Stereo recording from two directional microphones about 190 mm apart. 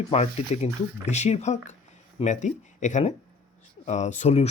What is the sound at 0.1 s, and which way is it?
Speech, 35° left (ahead or behind).